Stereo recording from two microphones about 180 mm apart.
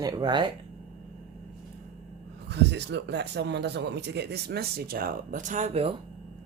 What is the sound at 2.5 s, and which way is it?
A man's voice, 70° right (ahead or behind).